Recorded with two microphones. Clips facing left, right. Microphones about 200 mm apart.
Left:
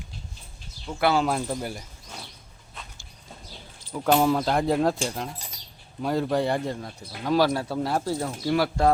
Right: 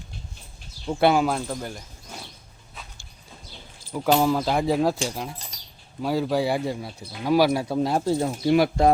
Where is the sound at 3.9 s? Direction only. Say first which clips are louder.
Right 1 dB; 5° right (ahead or behind).